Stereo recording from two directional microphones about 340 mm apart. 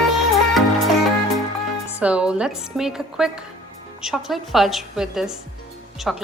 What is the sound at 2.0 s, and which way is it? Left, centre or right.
A woman's voice, centre.